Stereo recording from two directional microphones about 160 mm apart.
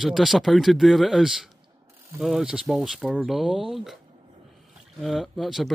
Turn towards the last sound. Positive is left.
turn(degrees=0)  # may be behind; listen again after turning